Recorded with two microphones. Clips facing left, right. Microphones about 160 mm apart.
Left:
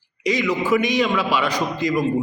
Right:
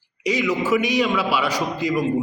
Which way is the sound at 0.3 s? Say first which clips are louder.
Left 1 dB; 5° right (ahead or behind).